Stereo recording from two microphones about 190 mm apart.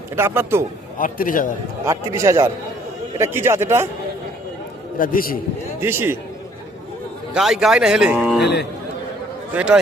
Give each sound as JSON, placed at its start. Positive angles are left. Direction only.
{"t": 0.2, "sound": "a man's voice", "side_deg": -15}
{"t": 0.9, "sound": "a man's voice", "side_deg": 45}
{"t": 1.8, "sound": "a man's voice", "side_deg": -15}
{"t": 4.9, "sound": "a man's voice", "side_deg": 45}
{"t": 5.8, "sound": "a man's voice", "side_deg": -10}
{"t": 7.3, "sound": "speech", "side_deg": 0}
{"t": 8.4, "sound": "a man's voice", "side_deg": 60}
{"t": 9.6, "sound": "speech", "side_deg": -5}